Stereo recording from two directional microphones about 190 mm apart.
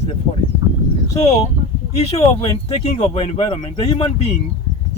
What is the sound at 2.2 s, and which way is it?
Speech, 30° left (ahead or behind).